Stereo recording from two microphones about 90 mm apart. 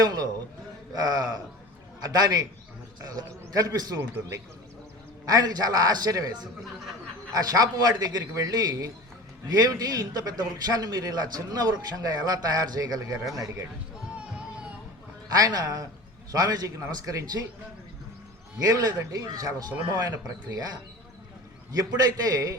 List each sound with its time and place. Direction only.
0.0 s a sound: 45° right (ahead or behind)
0.9 s a man's voice: 45° right (ahead or behind)
5.2 s a man's voice: 45° right (ahead or behind)
15.3 s a man's voice: 45° right (ahead or behind)
18.6 s a man's voice: 45° right (ahead or behind)